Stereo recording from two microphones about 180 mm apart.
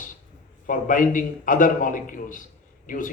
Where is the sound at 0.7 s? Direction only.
50° left (ahead or behind).